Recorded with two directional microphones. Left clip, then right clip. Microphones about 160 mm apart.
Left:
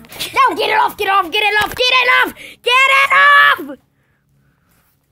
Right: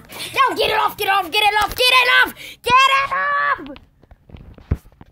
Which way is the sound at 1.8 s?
10° left (ahead or behind).